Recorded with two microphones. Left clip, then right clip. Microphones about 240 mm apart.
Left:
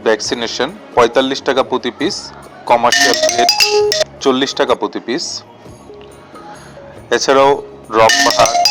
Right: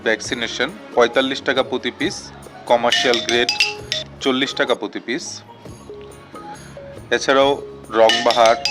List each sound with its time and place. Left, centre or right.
0.0 s speech: centre
2.9 s speech: left
4.2 s speech: centre
7.3 s speech: centre
8.0 s speech: left